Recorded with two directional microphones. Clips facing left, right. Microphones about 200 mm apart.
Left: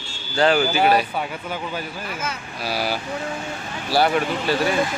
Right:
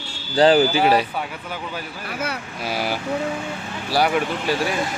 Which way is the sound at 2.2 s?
65° right (ahead or behind).